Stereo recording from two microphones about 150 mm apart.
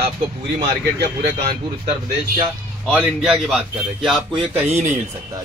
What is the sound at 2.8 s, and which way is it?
Speech, 5° right (ahead or behind).